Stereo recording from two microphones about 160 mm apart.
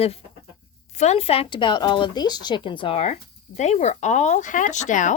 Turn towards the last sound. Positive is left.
turn(degrees=50)  # may be behind; listen again after turning